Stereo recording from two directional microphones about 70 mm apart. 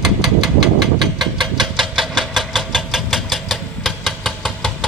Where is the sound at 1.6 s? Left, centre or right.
Centre.